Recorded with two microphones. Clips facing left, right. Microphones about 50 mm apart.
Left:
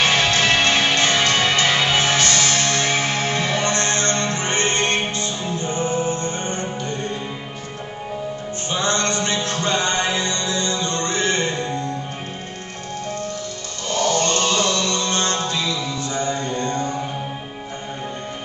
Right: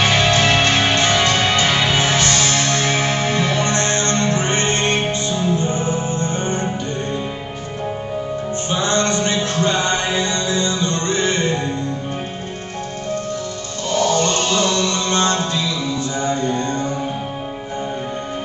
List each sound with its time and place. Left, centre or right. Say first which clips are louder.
0.0 s music: right 2 dB; right
8.8 s music: right 3 dB; right
14.1 s music: right 2 dB; right